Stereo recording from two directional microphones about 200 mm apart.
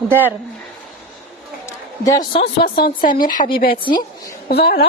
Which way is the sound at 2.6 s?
50° left (ahead or behind).